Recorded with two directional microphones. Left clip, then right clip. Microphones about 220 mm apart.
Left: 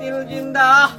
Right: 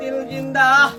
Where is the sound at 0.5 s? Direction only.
10° left (ahead or behind).